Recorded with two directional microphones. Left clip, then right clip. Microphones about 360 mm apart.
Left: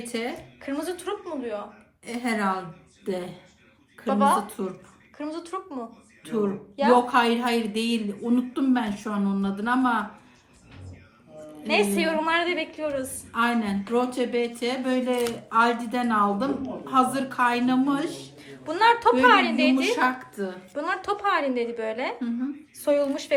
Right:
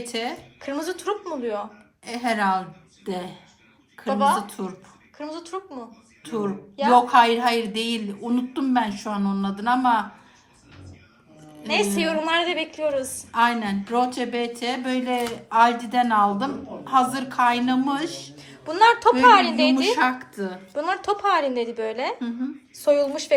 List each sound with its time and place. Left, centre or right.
0.1 s a woman's voice: right
0.6 s a woman's voice: centre
2.0 s a woman's voice: right
4.0 s a woman's voice: centre
4.4 s a woman's voice: right
5.1 s a woman's voice: centre
6.9 s a woman's voice: right
11.7 s a woman's voice: centre
13.3 s a woman's voice: right
18.3 s a sound: centre
19.2 s a woman's voice: centre
19.8 s a woman's voice: right
20.7 s a woman's voice: centre